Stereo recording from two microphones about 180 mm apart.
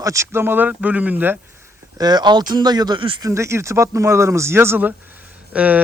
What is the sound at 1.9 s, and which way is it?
A man's voice, 20° right (ahead or behind).